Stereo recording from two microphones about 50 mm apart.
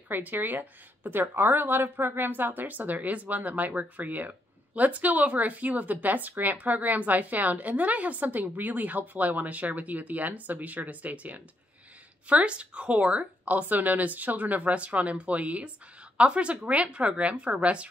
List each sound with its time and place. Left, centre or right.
0.1 s a woman's voice: right